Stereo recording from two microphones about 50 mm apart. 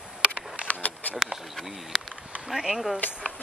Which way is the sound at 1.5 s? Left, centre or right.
Centre.